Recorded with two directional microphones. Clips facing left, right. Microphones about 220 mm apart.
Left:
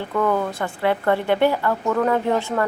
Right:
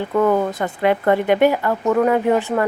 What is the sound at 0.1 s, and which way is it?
A woman's voice, 25° right (ahead or behind).